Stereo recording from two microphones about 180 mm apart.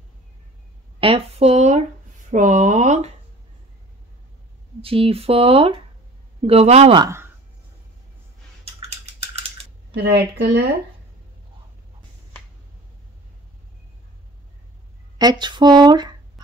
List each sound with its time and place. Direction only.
1.0 s speech: 35° right (ahead or behind)
4.8 s speech: 30° right (ahead or behind)
10.0 s speech: 65° right (ahead or behind)
15.1 s speech: 25° right (ahead or behind)